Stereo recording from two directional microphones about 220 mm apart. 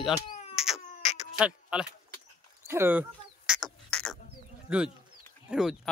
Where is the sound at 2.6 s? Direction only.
10° right (ahead or behind).